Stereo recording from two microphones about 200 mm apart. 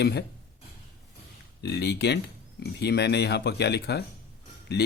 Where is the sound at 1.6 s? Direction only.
55° left (ahead or behind).